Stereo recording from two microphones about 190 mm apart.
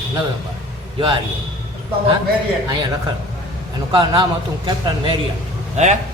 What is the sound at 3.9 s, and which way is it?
Speech, 25° right (ahead or behind).